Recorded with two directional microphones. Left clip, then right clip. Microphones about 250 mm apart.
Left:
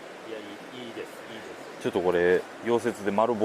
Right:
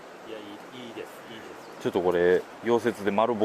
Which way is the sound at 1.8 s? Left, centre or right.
Centre.